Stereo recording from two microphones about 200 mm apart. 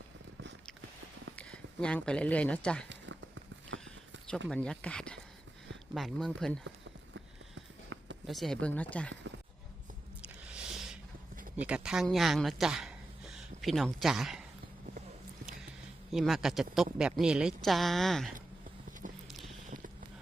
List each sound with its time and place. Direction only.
1.4 s speech: 5° left (ahead or behind)
2.9 s clip-clop: 65° right (ahead or behind)
4.4 s speech: 5° left (ahead or behind)
6.7 s clip-clop: 75° right (ahead or behind)
8.3 s speech: centre (ahead or behind)
10.2 s squish: 5° right (ahead or behind)
11.5 s speech: 5° right (ahead or behind)
16.1 s speech: centre (ahead or behind)
19.0 s a sound: 40° right (ahead or behind)